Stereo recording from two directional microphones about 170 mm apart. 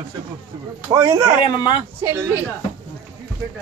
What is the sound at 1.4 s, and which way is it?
Speech, 25° left (ahead or behind).